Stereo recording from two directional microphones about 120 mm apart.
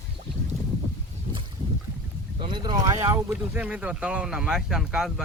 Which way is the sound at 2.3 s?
40° right (ahead or behind).